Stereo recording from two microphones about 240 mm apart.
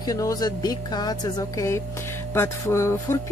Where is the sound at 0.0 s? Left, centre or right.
Centre.